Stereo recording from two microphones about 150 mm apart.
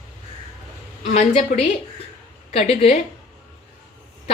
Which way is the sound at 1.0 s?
50° left (ahead or behind).